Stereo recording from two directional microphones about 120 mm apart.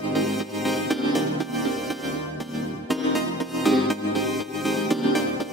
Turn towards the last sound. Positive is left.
turn(degrees=0)  # may be behind; listen again after turning